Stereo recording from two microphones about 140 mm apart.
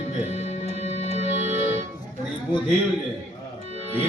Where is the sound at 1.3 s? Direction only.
50° left (ahead or behind).